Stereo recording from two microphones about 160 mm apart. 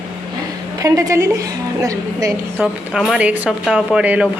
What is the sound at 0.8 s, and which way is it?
A woman's voice, 20° right (ahead or behind).